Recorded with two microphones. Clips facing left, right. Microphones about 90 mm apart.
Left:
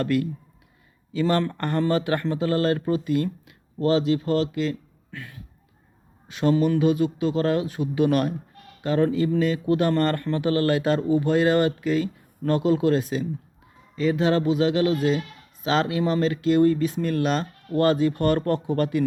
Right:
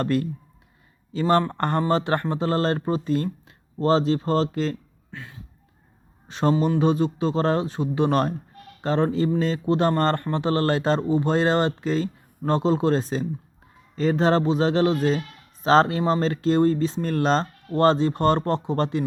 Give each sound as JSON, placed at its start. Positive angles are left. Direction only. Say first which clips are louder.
{"t": 0.0, "sound": "speech", "louder": "even", "side_deg": -35}
{"t": 5.1, "sound": "speech", "louder": "even", "side_deg": -25}